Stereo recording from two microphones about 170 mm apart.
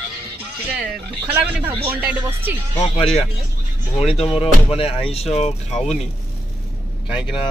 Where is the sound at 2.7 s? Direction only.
30° left (ahead or behind).